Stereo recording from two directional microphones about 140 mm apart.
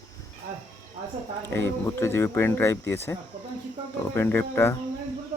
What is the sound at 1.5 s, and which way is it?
Speech, 20° left (ahead or behind).